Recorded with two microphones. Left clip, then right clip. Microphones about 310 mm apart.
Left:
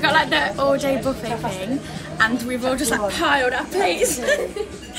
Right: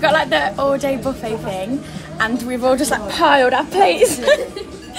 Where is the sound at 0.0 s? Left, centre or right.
Centre.